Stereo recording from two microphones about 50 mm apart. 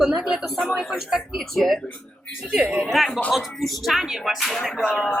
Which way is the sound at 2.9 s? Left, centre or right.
Centre.